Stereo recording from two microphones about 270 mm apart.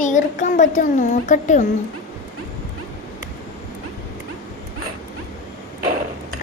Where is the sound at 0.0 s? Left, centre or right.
Left.